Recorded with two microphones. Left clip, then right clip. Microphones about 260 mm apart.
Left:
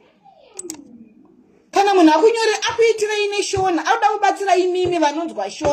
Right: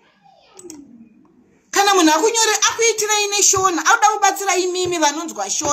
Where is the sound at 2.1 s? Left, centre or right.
Right.